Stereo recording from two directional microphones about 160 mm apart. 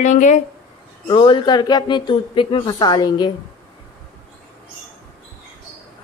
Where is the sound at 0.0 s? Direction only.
50° left (ahead or behind).